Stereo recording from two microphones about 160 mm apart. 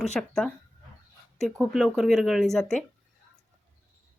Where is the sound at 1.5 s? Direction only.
5° right (ahead or behind).